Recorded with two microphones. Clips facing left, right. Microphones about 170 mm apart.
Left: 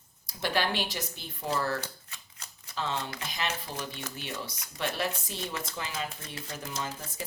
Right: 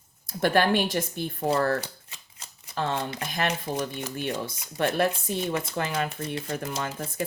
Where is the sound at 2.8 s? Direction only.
55° right (ahead or behind).